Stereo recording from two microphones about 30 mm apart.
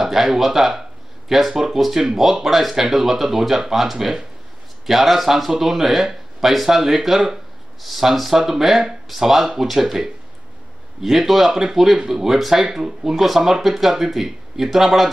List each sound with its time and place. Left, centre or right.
0.0 s speech: centre